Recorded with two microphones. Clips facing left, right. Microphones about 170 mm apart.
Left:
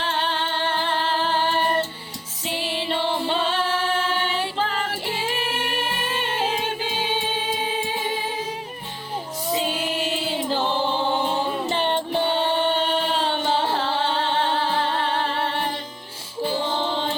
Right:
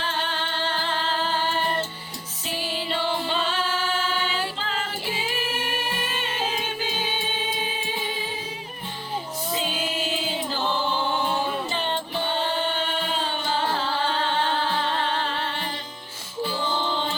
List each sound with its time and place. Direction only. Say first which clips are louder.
0.1 s music: left 4 dB; 60° left (ahead or behind)
2.5 s music: left 3 dB; 25° left (ahead or behind)
4.5 s female singing: left 5 dB; 60° left (ahead or behind)
10.6 s music: even; 25° left (ahead or behind)
11.7 s music: left 5 dB; 60° left (ahead or behind)
12.4 s music: left 5 dB; 25° left (ahead or behind)
12.9 s music: left 5 dB; 65° left (ahead or behind)
14.5 s music: left 2 dB; 65° left (ahead or behind)